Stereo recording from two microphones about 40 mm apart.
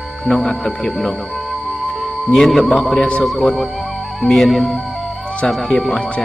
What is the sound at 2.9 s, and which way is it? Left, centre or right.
Speech, left.